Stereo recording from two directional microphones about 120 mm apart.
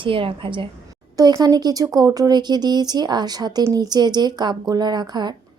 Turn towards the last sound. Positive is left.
turn(degrees=-35)  # may be behind; listen again after turning